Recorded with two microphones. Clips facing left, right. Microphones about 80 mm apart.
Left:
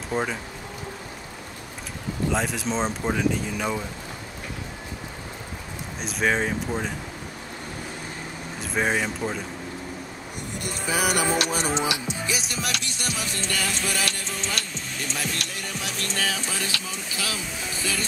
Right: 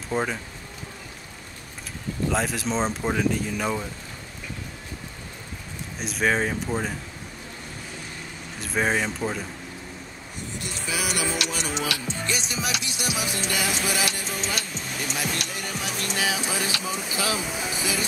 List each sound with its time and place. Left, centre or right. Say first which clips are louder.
0.1 s speech: even; centre
2.3 s speech: right 1 dB; centre
5.9 s speech: even; centre
8.5 s speech: even; centre
10.6 s music: left 5 dB; left
11.7 s music: left 3 dB; left
12.2 s music: even; centre